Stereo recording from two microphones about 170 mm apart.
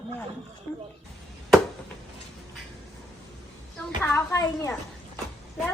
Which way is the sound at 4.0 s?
15° left (ahead or behind).